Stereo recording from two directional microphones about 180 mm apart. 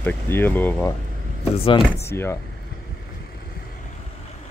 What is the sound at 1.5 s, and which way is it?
Speech, 30° left (ahead or behind).